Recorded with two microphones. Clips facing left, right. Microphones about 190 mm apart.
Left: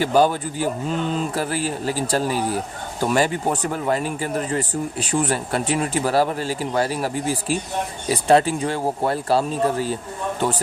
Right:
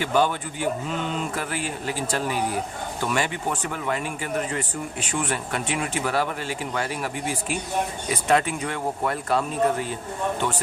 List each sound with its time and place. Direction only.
0.0 s speech: 35° left (ahead or behind)